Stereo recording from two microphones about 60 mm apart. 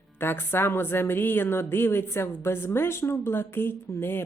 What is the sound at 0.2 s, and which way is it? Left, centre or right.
Speech, left.